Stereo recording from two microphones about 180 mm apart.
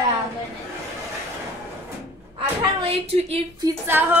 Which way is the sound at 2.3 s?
35° right (ahead or behind).